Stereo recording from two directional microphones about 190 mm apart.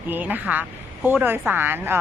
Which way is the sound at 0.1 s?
10° right (ahead or behind).